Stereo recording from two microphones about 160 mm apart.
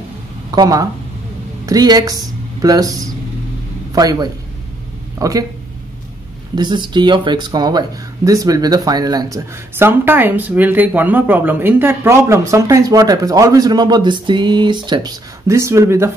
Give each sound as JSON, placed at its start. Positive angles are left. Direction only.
{"t": 0.5, "sound": "a man's voice", "side_deg": -25}
{"t": 6.5, "sound": "speech", "side_deg": -30}
{"t": 9.8, "sound": "speech", "side_deg": -15}